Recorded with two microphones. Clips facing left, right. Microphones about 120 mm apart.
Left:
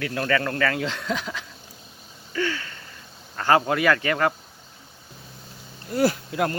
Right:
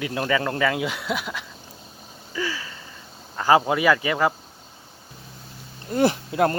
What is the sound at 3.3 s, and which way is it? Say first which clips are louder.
Speech: right 2 dB; 10° right (ahead or behind).